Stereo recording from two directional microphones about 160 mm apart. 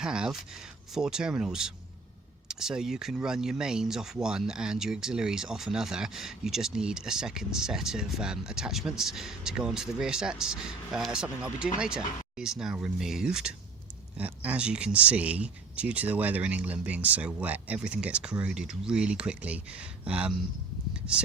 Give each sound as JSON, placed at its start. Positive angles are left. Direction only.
{"t": 0.0, "sound": "speech", "side_deg": -5}
{"t": 21.0, "sound": "speech", "side_deg": 15}